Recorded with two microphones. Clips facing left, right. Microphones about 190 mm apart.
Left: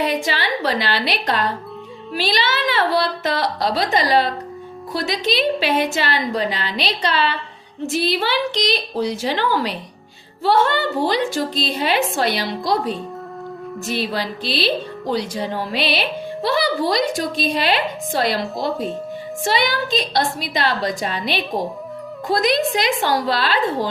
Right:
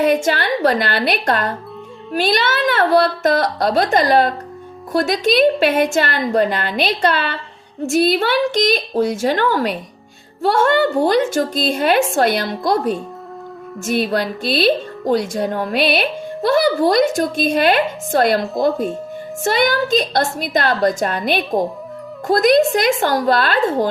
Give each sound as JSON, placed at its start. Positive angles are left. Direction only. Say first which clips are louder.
{"t": 0.0, "sound": "speech", "louder": "right 5 dB", "side_deg": -50}